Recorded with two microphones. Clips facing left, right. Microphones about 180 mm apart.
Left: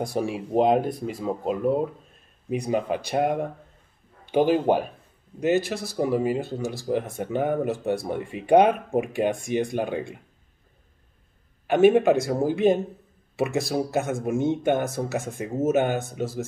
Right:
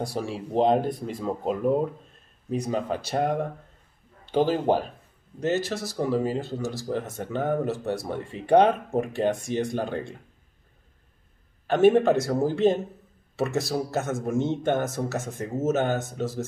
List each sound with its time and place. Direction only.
0.0 s speech: 15° left (ahead or behind)
2.5 s speech: 15° left (ahead or behind)
11.6 s speech: 10° left (ahead or behind)